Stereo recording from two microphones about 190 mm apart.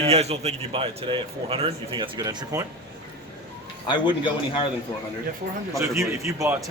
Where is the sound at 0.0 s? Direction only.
35° right (ahead or behind).